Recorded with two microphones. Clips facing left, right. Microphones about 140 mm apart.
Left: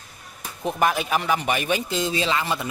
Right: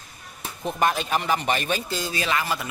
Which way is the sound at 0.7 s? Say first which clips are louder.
Left 1 dB; 5° left (ahead or behind).